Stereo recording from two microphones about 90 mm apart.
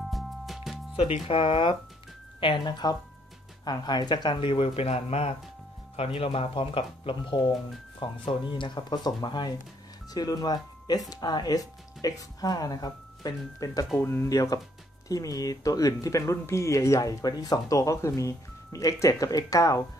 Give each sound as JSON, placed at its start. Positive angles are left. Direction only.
{"t": 0.1, "sound": "music", "side_deg": 0}
{"t": 1.2, "sound": "speech", "side_deg": 75}
{"t": 5.9, "sound": "speech", "side_deg": 90}
{"t": 8.0, "sound": "speech", "side_deg": 65}
{"t": 13.9, "sound": "speech", "side_deg": 30}
{"t": 17.2, "sound": "speech", "side_deg": 45}